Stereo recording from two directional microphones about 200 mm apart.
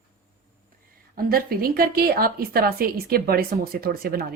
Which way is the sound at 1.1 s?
50° right (ahead or behind).